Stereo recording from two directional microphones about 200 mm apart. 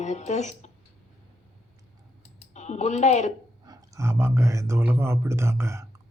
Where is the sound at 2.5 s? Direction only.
35° left (ahead or behind).